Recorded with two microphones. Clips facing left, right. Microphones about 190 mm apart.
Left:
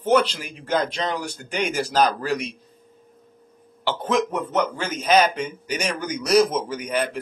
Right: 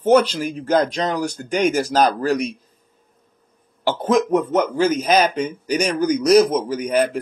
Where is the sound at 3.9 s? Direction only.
45° right (ahead or behind).